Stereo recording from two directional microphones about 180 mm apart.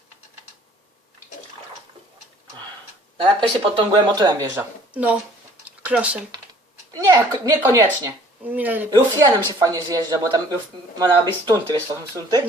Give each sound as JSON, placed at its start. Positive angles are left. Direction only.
{"t": 3.2, "sound": "speech", "side_deg": -25}
{"t": 5.6, "sound": "a sound", "side_deg": -5}
{"t": 6.9, "sound": "speech", "side_deg": -20}
{"t": 9.2, "sound": "speech", "side_deg": -20}